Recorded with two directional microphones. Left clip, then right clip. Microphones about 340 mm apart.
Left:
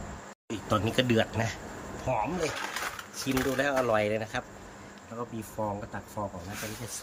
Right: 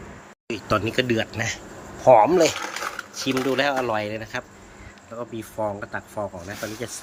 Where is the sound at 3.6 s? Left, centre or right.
Centre.